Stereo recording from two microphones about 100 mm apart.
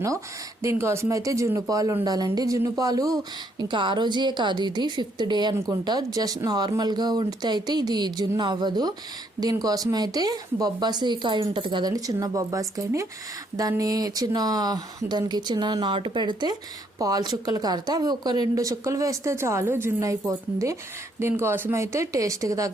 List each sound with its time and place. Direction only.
0.6 s speech: 30° right (ahead or behind)
3.6 s speech: 50° right (ahead or behind)
11.9 s speech: 40° right (ahead or behind)
17.0 s speech: 40° right (ahead or behind)